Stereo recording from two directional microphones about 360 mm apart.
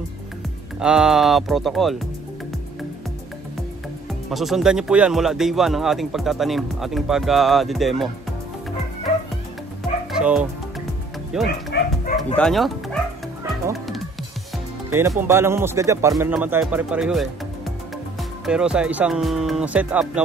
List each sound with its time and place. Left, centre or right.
0.7 s speech: centre
4.3 s speech: centre
10.1 s music: centre
11.3 s speech: centre
11.7 s dog: left
12.4 s speech: centre
13.7 s music: centre
14.9 s speech: centre
18.4 s speech: centre